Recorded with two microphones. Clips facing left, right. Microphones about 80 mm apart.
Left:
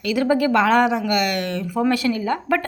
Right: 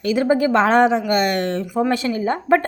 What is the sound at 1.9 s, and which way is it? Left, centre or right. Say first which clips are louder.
Speech: even; right.